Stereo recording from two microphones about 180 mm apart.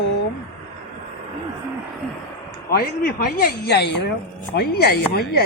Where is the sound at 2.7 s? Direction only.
60° left (ahead or behind).